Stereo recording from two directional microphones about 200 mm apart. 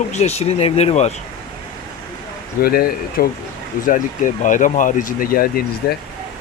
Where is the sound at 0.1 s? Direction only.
35° left (ahead or behind).